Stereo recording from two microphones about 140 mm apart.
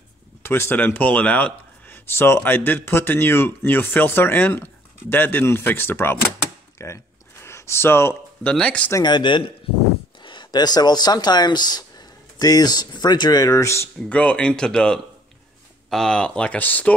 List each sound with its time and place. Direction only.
0.4 s speech: 15° left (ahead or behind)
8.9 s speech: 30° left (ahead or behind)
13.9 s speech: 10° left (ahead or behind)